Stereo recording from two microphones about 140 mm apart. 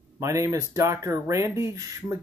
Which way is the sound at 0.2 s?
20° right (ahead or behind).